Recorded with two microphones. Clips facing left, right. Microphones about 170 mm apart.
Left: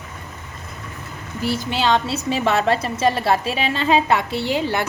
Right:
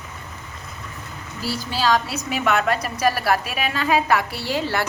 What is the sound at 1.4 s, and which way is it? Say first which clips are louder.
A woman's voice: left 2 dB; 20° left (ahead or behind).